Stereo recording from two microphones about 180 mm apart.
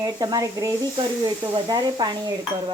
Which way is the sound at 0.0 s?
20° right (ahead or behind).